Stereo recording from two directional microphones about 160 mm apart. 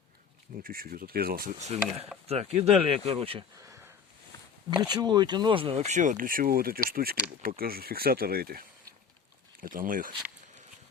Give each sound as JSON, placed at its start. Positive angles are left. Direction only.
{"t": 0.6, "sound": "speech", "side_deg": -65}
{"t": 1.6, "sound": "speech", "side_deg": -40}
{"t": 3.6, "sound": "a sound", "side_deg": -20}
{"t": 4.8, "sound": "speech", "side_deg": -25}
{"t": 9.6, "sound": "speech", "side_deg": -60}